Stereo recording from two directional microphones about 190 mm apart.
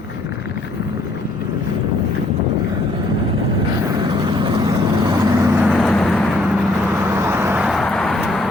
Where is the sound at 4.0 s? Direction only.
25° right (ahead or behind).